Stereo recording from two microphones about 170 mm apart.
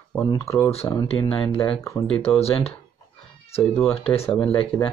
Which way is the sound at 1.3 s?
30° left (ahead or behind).